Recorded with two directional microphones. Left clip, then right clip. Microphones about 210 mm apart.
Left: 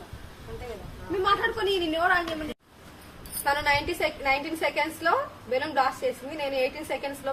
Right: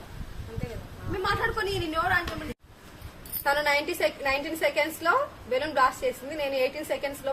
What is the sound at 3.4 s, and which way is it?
A woman's voice, 15° right (ahead or behind).